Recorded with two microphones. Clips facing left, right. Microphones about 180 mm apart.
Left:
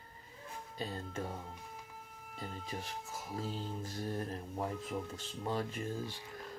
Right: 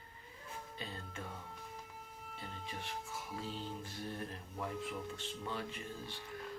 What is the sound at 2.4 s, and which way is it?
Speech, 40° left (ahead or behind).